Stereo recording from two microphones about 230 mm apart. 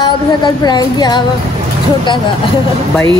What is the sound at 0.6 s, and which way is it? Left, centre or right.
Speech, centre.